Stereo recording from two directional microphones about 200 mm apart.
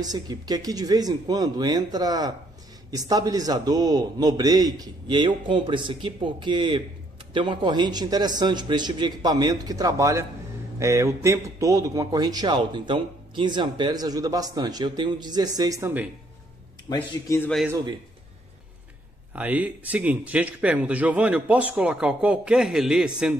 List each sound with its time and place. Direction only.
0.0 s a man's voice: 20° right (ahead or behind)
16.9 s a man's voice: 20° left (ahead or behind)
17.4 s a man's voice: 5° left (ahead or behind)
17.6 s a man's voice: 20° right (ahead or behind)
19.3 s a man's voice: 10° right (ahead or behind)